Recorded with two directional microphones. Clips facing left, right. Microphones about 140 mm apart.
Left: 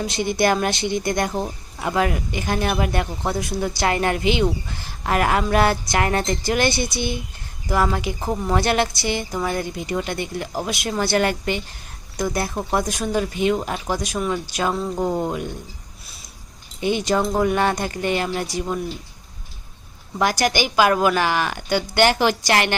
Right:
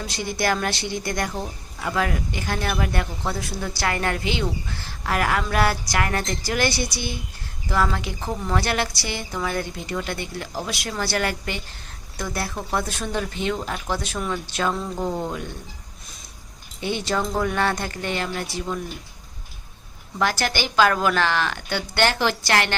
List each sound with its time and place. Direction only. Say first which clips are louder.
0.0 s speech: left 5 dB; 20° left (ahead or behind)
16.8 s speech: left 5 dB; 15° left (ahead or behind)
20.1 s speech: left 4 dB; 15° left (ahead or behind)